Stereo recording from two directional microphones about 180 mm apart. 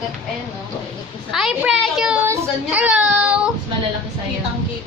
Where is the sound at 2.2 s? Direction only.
10° right (ahead or behind).